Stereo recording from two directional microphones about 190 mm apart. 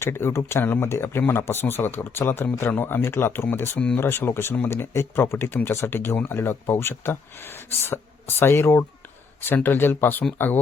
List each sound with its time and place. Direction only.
0.0 s speech: 10° left (ahead or behind)